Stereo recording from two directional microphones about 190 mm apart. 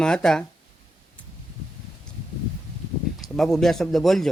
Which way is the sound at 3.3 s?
Centre (ahead or behind).